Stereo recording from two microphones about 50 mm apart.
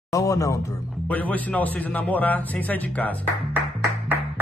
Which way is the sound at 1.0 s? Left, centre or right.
Left.